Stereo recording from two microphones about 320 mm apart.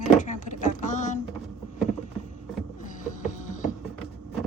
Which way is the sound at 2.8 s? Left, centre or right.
Left.